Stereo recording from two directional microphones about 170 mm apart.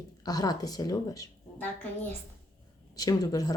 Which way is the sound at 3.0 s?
20° left (ahead or behind).